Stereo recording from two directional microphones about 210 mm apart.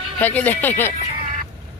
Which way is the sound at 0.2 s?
10° left (ahead or behind).